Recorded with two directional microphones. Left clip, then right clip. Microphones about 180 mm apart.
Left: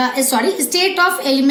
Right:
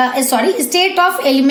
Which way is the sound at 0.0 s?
50° right (ahead or behind).